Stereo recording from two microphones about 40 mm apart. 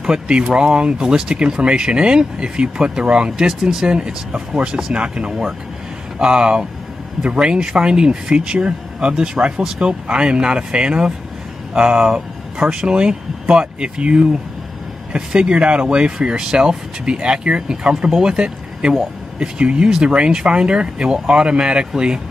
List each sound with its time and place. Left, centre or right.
0.0 s speech: right
12.0 s speech: centre